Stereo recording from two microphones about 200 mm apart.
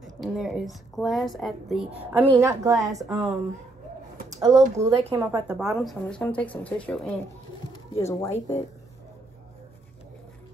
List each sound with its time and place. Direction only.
0.0 s a woman's voice: centre (ahead or behind); by 2.8 s 15° right (ahead or behind)
3.0 s speech: 5° right (ahead or behind)
4.3 s speech: 15° right (ahead or behind); by 8.5 s 15° left (ahead or behind)